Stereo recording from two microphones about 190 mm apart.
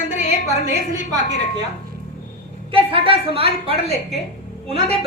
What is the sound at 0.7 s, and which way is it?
Speech, 35° left (ahead or behind).